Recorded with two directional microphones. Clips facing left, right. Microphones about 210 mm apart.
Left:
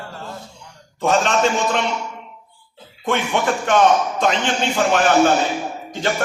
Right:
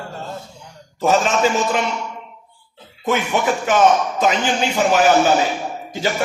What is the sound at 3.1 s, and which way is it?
A man's voice, 5° right (ahead or behind).